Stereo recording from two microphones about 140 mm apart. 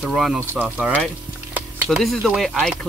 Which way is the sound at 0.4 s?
15° right (ahead or behind).